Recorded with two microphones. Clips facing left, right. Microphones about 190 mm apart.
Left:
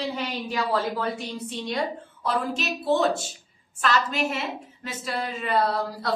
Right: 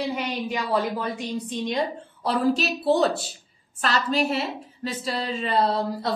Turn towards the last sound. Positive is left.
turn(degrees=-25)  # may be behind; listen again after turning